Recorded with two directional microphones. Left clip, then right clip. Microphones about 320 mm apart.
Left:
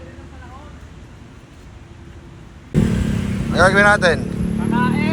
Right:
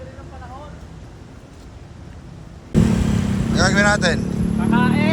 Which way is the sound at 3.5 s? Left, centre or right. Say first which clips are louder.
Left 5 dB; centre.